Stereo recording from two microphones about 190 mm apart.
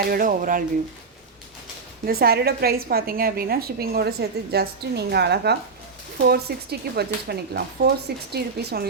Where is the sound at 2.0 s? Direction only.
55° right (ahead or behind).